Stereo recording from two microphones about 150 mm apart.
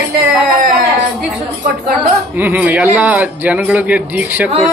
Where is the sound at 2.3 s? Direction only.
15° right (ahead or behind).